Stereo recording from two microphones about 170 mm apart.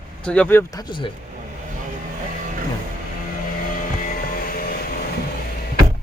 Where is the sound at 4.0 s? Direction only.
55° left (ahead or behind).